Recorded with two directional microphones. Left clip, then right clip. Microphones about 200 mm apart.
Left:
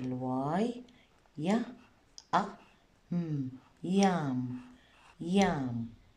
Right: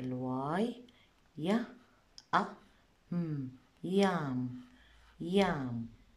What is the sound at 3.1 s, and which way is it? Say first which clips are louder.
Speech: left 3 dB; centre (ahead or behind).